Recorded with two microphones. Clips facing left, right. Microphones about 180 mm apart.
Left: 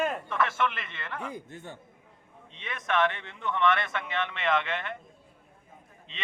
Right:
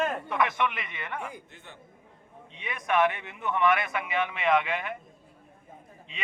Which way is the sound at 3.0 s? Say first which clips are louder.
Right 2 dB; 10° right (ahead or behind).